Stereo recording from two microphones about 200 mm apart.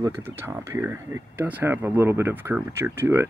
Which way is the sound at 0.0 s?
10° right (ahead or behind).